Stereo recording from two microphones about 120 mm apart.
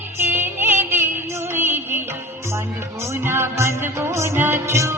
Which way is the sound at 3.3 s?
20° right (ahead or behind).